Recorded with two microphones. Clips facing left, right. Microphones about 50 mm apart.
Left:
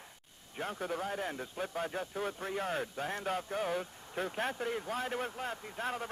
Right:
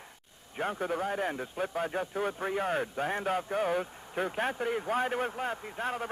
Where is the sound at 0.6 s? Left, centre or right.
Centre.